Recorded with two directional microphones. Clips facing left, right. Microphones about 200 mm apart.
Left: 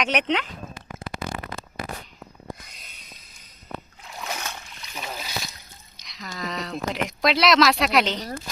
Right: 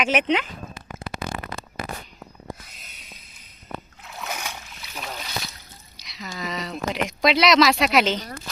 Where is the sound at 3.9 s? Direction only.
Centre (ahead or behind).